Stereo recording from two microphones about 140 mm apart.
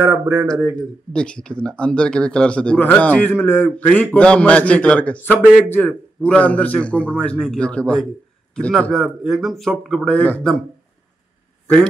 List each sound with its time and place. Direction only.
0.0 s a man's voice: 15° right (ahead or behind)
0.7 s speech: 5° left (ahead or behind)